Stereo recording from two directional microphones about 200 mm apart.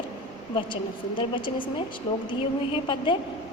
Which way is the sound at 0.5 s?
25° left (ahead or behind).